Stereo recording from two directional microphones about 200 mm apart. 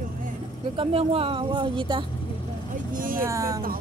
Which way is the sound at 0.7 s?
30° right (ahead or behind).